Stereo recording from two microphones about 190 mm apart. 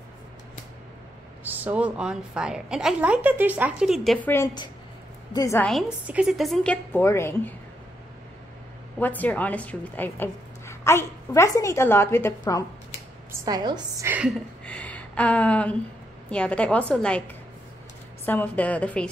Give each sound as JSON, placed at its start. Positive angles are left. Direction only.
{"t": 1.4, "sound": "a woman's voice", "side_deg": -10}
{"t": 5.7, "sound": "a woman's voice", "side_deg": -5}
{"t": 9.0, "sound": "a woman's voice", "side_deg": 10}
{"t": 13.3, "sound": "a woman's voice", "side_deg": -20}
{"t": 14.7, "sound": "a sound", "side_deg": 5}
{"t": 16.3, "sound": "a woman's voice", "side_deg": 5}
{"t": 18.2, "sound": "a woman's voice", "side_deg": 10}